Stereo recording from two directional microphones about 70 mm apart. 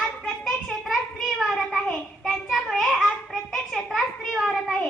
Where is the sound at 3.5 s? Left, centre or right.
Centre.